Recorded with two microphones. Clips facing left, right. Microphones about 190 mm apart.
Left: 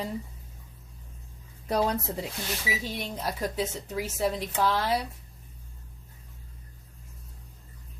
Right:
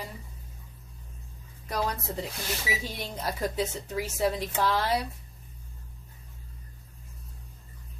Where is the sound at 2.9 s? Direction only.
Centre (ahead or behind).